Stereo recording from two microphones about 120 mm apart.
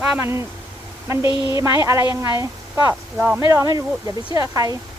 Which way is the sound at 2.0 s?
40° left (ahead or behind).